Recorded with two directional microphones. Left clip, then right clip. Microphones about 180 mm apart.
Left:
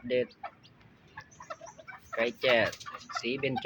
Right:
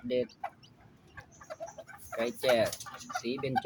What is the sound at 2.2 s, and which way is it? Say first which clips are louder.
Speech: left 2 dB; 5° right (ahead or behind).